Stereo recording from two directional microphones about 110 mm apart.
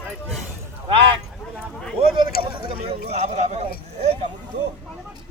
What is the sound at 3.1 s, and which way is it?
Speech, 90° right.